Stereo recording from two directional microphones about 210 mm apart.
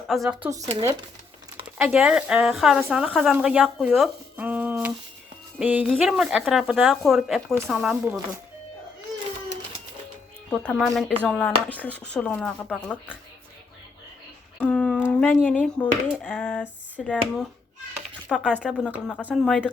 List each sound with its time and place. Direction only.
0.1 s a woman's voice: centre (ahead or behind)
0.5 s speech: 15° right (ahead or behind)
1.8 s a woman's voice: 5° right (ahead or behind)
10.5 s a woman's voice: 5° left (ahead or behind)
14.6 s a sound: 5° left (ahead or behind)
15.2 s a woman's voice: 5° left (ahead or behind)